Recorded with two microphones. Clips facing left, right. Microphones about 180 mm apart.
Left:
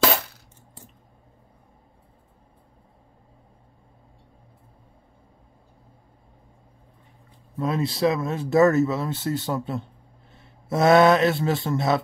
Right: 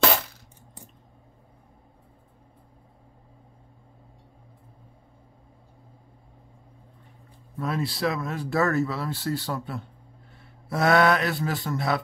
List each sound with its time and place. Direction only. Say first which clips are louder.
7.5 s speech: left 4 dB; 20° left (ahead or behind)